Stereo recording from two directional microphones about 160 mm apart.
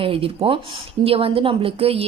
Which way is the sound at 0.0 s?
35° right (ahead or behind).